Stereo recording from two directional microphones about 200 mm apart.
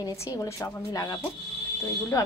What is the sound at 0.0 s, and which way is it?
Speech, 15° left (ahead or behind).